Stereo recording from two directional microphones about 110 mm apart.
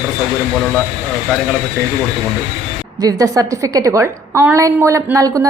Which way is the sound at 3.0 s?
35° right (ahead or behind).